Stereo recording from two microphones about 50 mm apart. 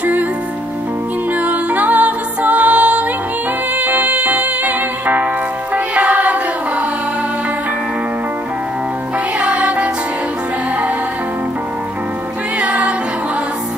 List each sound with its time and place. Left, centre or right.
0.0 s music: right
1.4 s music: right
9.4 s music: right
12.5 s music: right